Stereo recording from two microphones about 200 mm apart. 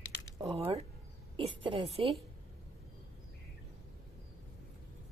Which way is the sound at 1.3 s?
25° right (ahead or behind).